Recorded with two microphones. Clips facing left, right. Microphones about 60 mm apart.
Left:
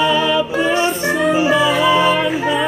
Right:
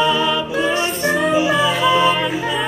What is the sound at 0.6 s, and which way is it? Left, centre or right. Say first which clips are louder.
Music: left 2 dB; left.